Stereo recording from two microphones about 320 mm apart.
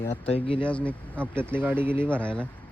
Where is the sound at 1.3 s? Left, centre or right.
Centre.